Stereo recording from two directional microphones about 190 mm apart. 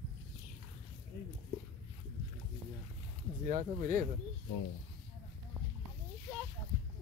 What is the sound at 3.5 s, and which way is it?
Speech, 40° right (ahead or behind).